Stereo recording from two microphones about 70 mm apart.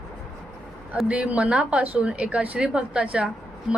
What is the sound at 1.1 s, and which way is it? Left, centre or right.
A woman's voice, centre.